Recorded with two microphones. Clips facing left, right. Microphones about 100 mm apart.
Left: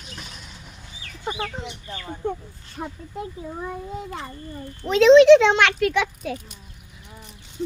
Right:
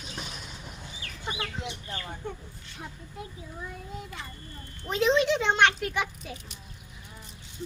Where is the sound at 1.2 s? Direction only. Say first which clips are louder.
Left 6 dB; 45° left (ahead or behind).